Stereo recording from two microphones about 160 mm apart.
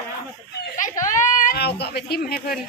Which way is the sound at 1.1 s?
55° left (ahead or behind).